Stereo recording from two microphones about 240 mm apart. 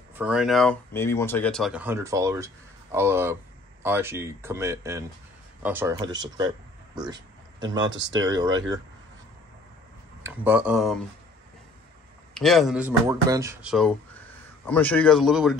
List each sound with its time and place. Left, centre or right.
0.1 s speech: centre
7.9 s speech: right
8.3 s speech: centre
10.2 s speech: centre
12.4 s speech: centre